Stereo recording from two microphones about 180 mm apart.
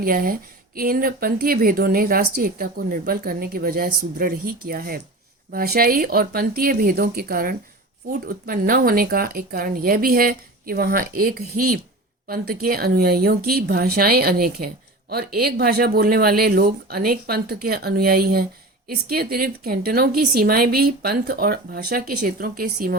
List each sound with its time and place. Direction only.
0.0 s a woman's voice: 55° right (ahead or behind)